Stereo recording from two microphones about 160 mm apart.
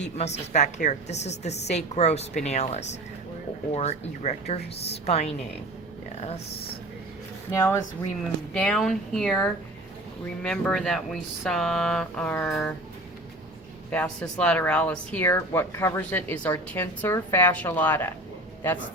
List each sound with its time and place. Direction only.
0.0 s a woman's voice: 45° left (ahead or behind)
7.5 s speech: 15° left (ahead or behind)
8.5 s speech: 5° left (ahead or behind)
13.9 s speech: 5° left (ahead or behind)